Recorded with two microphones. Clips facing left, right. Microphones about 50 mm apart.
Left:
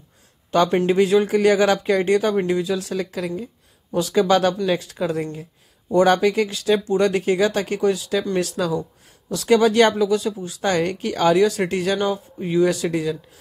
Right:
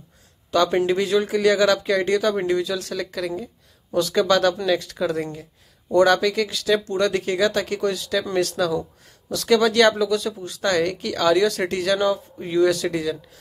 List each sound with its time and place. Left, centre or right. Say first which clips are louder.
0.8 s speech: left 4 dB; left
10.6 s speech: even; left
11.3 s speech: left 2 dB; centre